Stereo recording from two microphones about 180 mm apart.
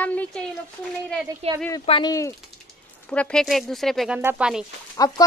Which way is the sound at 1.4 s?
35° right (ahead or behind).